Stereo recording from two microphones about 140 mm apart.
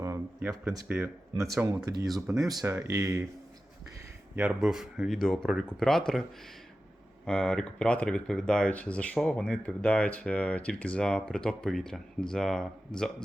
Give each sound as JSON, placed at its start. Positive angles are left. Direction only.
{"t": 0.0, "sound": "a sound", "side_deg": -20}
{"t": 0.9, "sound": "speech", "side_deg": -15}
{"t": 1.6, "sound": "speech", "side_deg": -25}
{"t": 4.4, "sound": "speech", "side_deg": -5}
{"t": 7.3, "sound": "speech", "side_deg": 5}